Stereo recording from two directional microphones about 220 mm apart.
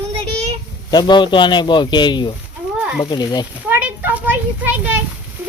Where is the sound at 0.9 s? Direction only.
20° left (ahead or behind).